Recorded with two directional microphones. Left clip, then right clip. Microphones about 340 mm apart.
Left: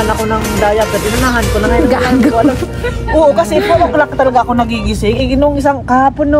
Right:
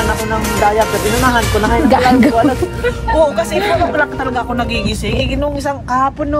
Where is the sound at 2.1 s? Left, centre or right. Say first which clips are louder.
Even; centre.